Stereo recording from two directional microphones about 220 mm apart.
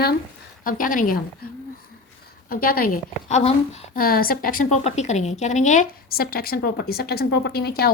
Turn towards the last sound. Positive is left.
turn(degrees=45)  # may be behind; listen again after turning